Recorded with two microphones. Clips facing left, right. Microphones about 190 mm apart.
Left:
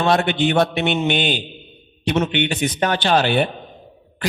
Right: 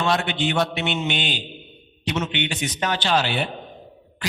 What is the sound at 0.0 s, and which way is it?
A man's voice, 55° left (ahead or behind).